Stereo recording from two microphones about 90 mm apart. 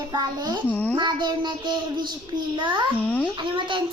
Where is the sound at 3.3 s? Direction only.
65° right (ahead or behind).